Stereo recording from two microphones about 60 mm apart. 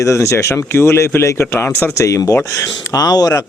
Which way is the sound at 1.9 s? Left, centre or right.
Left.